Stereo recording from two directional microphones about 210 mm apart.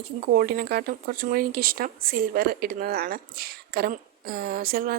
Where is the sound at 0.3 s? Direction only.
45° right (ahead or behind).